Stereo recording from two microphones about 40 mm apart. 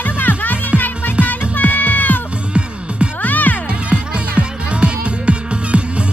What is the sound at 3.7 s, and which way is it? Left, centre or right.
Music, right.